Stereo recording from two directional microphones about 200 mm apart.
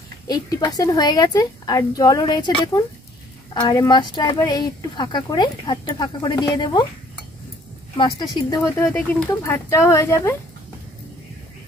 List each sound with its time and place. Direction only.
0.3 s speech: 20° left (ahead or behind)
8.0 s speech: 20° left (ahead or behind)